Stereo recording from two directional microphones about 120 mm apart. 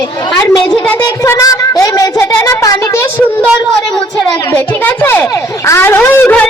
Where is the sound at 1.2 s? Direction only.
30° left (ahead or behind).